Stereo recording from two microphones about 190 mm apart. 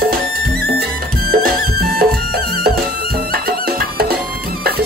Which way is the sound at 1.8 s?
55° right (ahead or behind).